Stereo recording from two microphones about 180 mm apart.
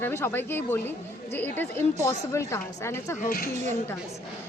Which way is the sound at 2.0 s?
15° left (ahead or behind).